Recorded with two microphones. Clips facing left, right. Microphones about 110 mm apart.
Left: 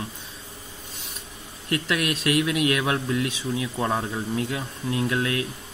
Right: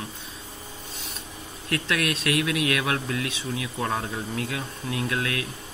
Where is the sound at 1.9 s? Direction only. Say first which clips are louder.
Left 2 dB; 25° left (ahead or behind).